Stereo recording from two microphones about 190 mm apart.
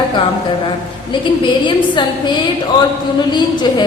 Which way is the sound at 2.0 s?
25° left (ahead or behind).